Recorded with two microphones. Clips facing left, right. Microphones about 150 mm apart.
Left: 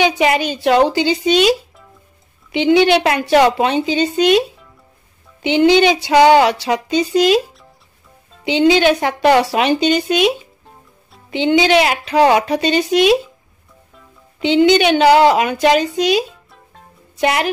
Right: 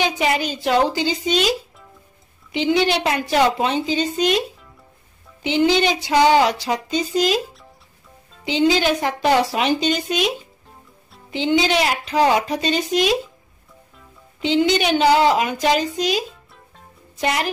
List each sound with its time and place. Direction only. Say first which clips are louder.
0.2 s speech: left 5 dB; 70° left (ahead or behind)
2.5 s speech: left 6 dB; 70° left (ahead or behind)
5.4 s speech: left 6 dB; 70° left (ahead or behind)
8.5 s speech: left 5 dB; 70° left (ahead or behind)
14.4 s speech: left 6 dB; 70° left (ahead or behind)